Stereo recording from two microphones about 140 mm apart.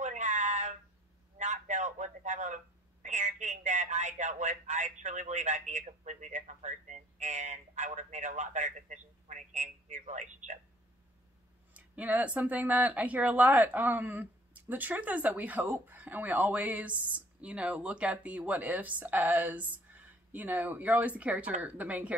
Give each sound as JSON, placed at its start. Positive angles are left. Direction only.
{"t": 0.0, "sound": "a sound", "side_deg": -60}
{"t": 1.4, "sound": "a man's voice", "side_deg": -60}
{"t": 11.7, "sound": "speech", "side_deg": -10}